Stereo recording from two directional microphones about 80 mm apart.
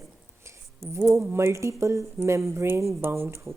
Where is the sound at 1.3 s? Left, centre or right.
Right.